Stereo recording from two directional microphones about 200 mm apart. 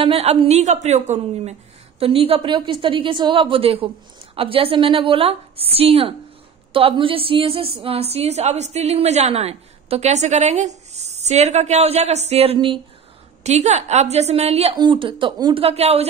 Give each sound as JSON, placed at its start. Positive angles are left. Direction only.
{"t": 0.0, "sound": "a woman's voice", "side_deg": -30}